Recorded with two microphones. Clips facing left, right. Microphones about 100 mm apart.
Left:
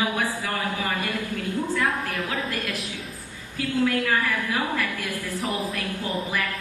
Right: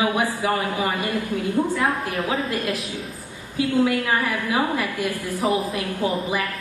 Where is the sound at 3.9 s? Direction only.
20° right (ahead or behind).